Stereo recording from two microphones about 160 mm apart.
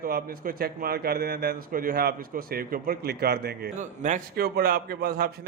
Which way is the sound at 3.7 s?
50° right (ahead or behind).